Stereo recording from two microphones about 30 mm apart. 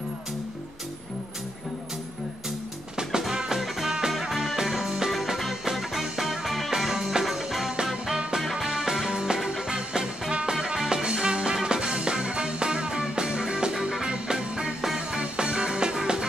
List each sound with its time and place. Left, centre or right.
3.0 s music: right
5.8 s music: centre
6.8 s music: centre
13.7 s music: centre
14.0 s music: right